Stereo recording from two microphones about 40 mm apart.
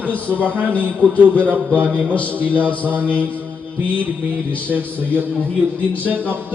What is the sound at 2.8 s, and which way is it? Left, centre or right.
Speech, right.